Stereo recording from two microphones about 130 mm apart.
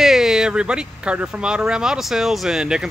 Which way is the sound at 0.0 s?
5° right (ahead or behind).